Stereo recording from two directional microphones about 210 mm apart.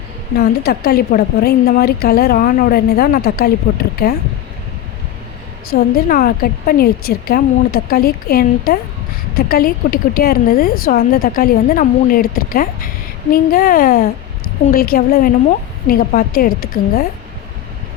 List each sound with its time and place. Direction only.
0.3 s speech: 50° left (ahead or behind)
5.7 s speech: 45° left (ahead or behind)